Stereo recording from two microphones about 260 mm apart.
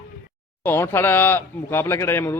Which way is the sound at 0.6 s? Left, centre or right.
Centre.